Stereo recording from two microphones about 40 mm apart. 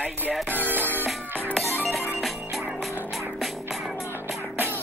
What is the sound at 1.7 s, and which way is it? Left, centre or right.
Music, right.